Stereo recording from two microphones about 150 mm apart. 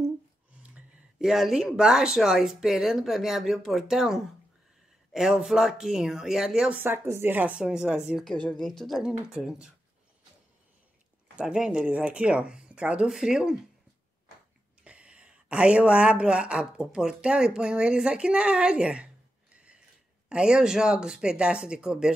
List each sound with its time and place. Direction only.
0.6 s speech: 5° right (ahead or behind)
11.3 s speech: 5° right (ahead or behind)
14.8 s speech: 10° right (ahead or behind)
19.5 s a sound: 5° right (ahead or behind)
20.2 s speech: 5° right (ahead or behind)